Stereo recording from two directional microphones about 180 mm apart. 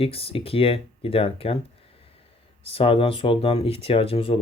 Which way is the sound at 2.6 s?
30° left (ahead or behind).